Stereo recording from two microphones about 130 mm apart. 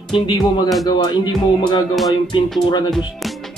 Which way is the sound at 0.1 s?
35° left (ahead or behind).